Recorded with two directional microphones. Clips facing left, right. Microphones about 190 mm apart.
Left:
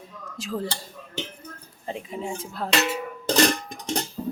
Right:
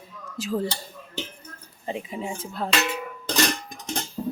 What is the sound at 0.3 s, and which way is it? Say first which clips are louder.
Speech: right 3 dB; centre (ahead or behind).